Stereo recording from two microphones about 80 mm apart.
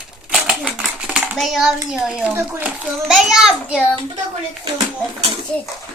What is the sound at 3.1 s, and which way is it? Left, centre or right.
Speech, centre.